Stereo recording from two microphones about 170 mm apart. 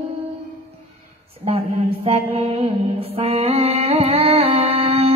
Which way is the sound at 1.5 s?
35° right (ahead or behind).